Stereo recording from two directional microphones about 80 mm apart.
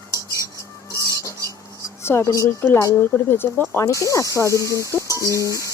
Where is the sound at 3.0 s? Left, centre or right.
Left.